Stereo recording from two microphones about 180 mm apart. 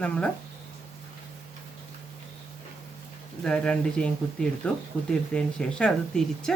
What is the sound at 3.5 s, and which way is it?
A woman's voice, 5° left (ahead or behind).